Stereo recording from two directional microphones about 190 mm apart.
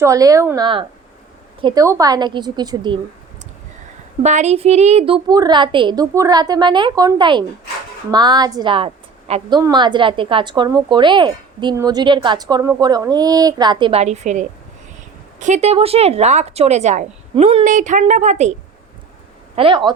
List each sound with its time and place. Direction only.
0.0 s a woman's voice: 15° right (ahead or behind)
4.2 s a woman's voice: 35° right (ahead or behind)
17.6 s a woman's voice: 40° right (ahead or behind)
19.5 s a woman's voice: 25° right (ahead or behind)